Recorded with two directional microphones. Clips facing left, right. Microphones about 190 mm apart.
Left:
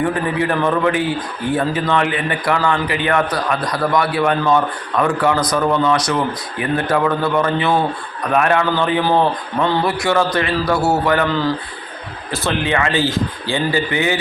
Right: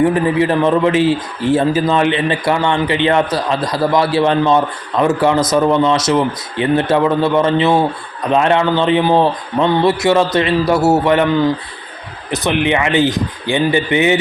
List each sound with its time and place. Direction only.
0.0 s speech: 25° right (ahead or behind)